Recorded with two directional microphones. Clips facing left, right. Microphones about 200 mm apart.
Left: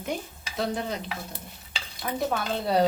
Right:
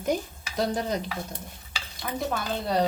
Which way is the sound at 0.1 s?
40° right (ahead or behind).